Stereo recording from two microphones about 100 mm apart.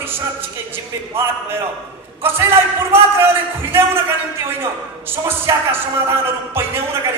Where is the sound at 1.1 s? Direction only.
25° right (ahead or behind).